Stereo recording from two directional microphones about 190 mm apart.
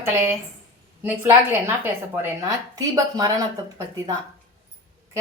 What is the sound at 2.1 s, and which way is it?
Speech, 15° right (ahead or behind).